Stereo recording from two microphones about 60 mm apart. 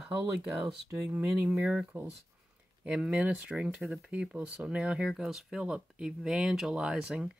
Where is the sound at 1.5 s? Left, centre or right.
Centre.